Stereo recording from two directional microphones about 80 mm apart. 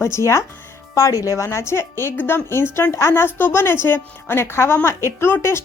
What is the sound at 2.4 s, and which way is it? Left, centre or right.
A woman's voice, left.